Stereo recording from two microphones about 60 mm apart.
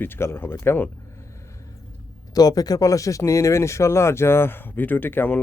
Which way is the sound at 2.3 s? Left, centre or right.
Left.